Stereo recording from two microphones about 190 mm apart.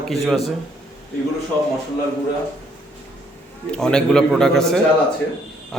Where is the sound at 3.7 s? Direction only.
5° left (ahead or behind).